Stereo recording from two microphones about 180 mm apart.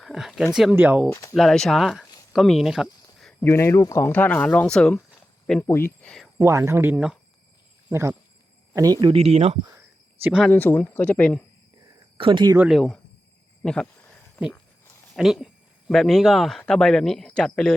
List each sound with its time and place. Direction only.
0.0 s speech: centre (ahead or behind)
1.1 s speech: 15° left (ahead or behind)
1.4 s speech: centre (ahead or behind)
2.3 s a sound: centre (ahead or behind)
3.4 s speech: 15° left (ahead or behind)
6.4 s speech: 15° right (ahead or behind)
9.1 s speech: 35° right (ahead or behind)
10.4 s speech: 10° left (ahead or behind)
12.1 s speech: 30° right (ahead or behind)
12.5 s speech: centre (ahead or behind)
13.6 s a sound: 5° left (ahead or behind)
15.1 s speech: centre (ahead or behind)